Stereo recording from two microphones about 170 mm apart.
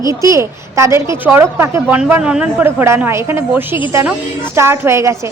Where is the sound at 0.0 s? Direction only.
20° right (ahead or behind).